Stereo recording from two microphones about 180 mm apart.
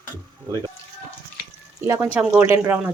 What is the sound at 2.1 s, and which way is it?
Speech, 10° right (ahead or behind).